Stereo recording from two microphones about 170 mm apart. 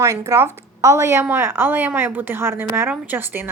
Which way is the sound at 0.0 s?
20° right (ahead or behind).